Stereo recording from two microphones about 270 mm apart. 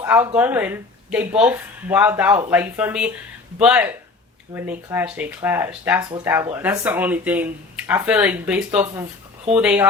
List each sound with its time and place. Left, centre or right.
0.0 s speech: centre